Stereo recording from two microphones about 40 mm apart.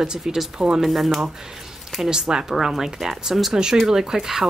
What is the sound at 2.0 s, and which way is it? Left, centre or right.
Speech, centre.